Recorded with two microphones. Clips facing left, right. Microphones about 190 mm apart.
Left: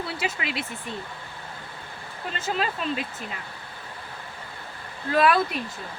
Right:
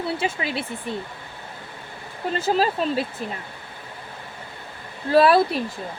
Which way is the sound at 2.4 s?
35° right (ahead or behind).